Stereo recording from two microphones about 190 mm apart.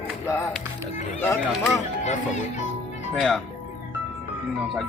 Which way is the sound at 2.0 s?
40° left (ahead or behind).